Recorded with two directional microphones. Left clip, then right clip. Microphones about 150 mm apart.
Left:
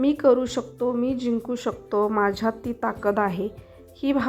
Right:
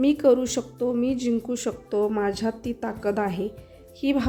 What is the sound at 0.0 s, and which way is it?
A woman's voice, 15° right (ahead or behind).